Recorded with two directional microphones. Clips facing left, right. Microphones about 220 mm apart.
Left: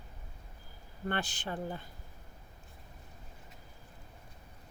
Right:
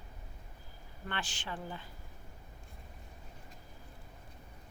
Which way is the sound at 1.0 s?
45° left (ahead or behind).